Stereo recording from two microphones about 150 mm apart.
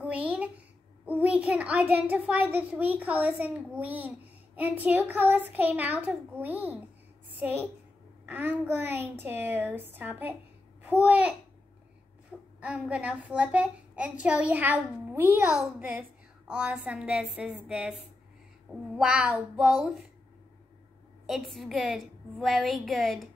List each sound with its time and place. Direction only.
0.0 s a sound: 10° right (ahead or behind)
1.0 s child singing: 10° right (ahead or behind)
2.0 s a child's voice: 10° right (ahead or behind)
12.5 s a child's voice: 10° right (ahead or behind)
15.4 s a woman's voice: centre (ahead or behind)
18.9 s a woman's voice: 5° right (ahead or behind)
21.3 s a woman's voice: centre (ahead or behind)